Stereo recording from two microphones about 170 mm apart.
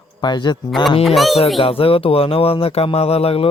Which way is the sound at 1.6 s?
35° left (ahead or behind).